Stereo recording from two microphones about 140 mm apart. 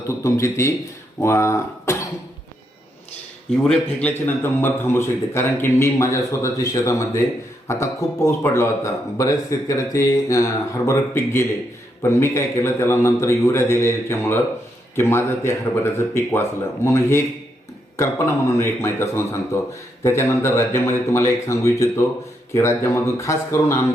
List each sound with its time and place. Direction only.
0.1 s speech: 20° left (ahead or behind)
3.6 s speech: 5° left (ahead or behind)